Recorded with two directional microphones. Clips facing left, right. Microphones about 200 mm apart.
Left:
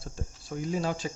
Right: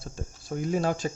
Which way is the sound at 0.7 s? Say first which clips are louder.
Right 4 dB; 50° right (ahead or behind).